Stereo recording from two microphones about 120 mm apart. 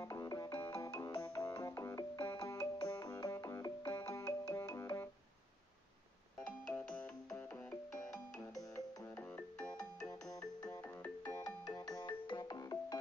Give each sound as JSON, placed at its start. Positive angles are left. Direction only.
{"t": 0.0, "sound": "music", "side_deg": 30}
{"t": 2.5, "sound": "music", "side_deg": 30}
{"t": 6.4, "sound": "music", "side_deg": 10}
{"t": 10.0, "sound": "ringtone", "side_deg": 30}
{"t": 11.2, "sound": "music", "side_deg": 30}